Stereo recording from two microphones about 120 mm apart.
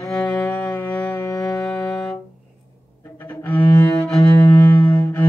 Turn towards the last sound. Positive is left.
turn(degrees=15)  # may be behind; listen again after turning